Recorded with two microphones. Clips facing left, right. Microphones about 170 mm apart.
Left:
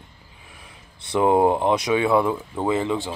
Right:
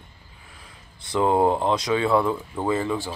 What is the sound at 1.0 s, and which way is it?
Speech, 20° left (ahead or behind).